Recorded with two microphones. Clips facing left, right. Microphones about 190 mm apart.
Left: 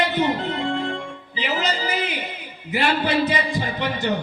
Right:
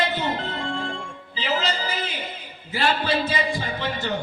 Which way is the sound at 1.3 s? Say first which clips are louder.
Left 1 dB; 15° left (ahead or behind).